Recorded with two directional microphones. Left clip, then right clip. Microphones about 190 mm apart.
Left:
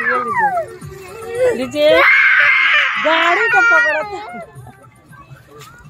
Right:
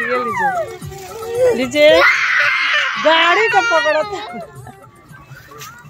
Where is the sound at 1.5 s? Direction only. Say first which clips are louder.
Right 2 dB; 10° right (ahead or behind).